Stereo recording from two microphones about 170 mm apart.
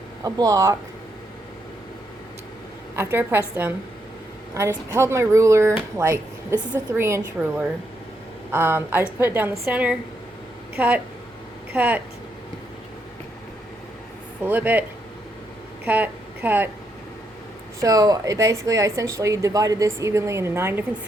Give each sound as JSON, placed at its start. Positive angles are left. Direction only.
{"t": 0.3, "sound": "speech", "side_deg": -20}
{"t": 2.9, "sound": "a woman's voice", "side_deg": -15}
{"t": 4.9, "sound": "a woman's voice", "side_deg": -15}
{"t": 14.4, "sound": "a woman's voice", "side_deg": -10}
{"t": 17.7, "sound": "a woman's voice", "side_deg": -20}